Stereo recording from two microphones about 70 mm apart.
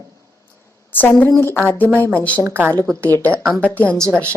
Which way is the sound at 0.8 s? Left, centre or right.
Left.